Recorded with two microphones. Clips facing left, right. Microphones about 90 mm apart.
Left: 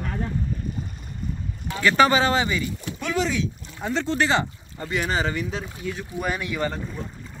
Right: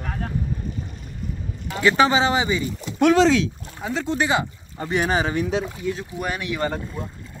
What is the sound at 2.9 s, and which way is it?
Speech, 85° right.